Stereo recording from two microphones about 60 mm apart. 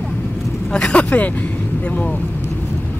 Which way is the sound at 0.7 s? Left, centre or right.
Centre.